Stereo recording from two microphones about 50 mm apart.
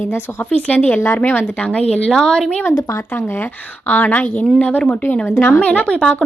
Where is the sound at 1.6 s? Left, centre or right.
Left.